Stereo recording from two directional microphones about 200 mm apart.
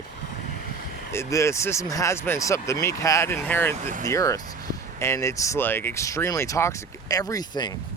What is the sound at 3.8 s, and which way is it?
Speech, 40° right (ahead or behind).